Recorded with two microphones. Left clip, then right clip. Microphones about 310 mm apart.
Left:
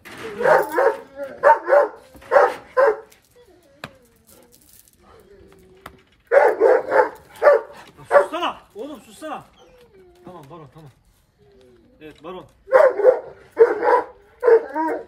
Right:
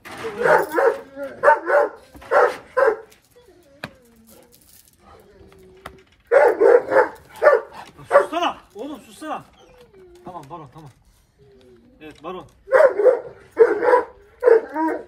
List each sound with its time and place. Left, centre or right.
0.0 s bow-wow: centre
0.4 s dog: left
5.0 s a sound: centre
6.2 s dog: left
8.3 s chopping: centre
12.0 s bird: centre
12.6 s dog: left